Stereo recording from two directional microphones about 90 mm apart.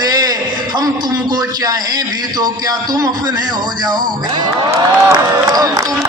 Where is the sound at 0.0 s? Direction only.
45° right (ahead or behind).